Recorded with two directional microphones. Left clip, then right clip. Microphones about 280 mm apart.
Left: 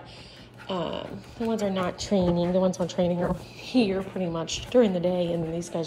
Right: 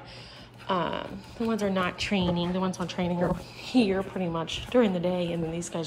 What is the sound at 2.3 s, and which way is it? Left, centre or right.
Speech, centre.